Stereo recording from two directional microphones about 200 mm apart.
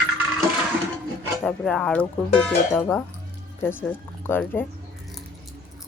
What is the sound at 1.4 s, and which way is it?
Speech, 5° left (ahead or behind).